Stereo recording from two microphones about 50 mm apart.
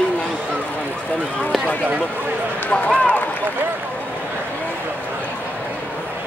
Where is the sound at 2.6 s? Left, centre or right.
Left.